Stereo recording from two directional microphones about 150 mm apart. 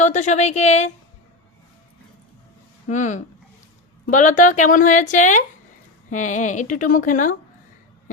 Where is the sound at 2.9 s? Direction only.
55° left (ahead or behind).